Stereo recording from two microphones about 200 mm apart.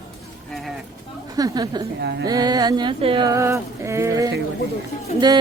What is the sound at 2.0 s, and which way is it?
Speech, 55° right (ahead or behind).